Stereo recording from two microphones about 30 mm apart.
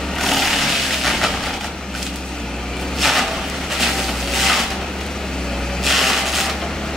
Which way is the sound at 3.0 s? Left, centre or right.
Centre.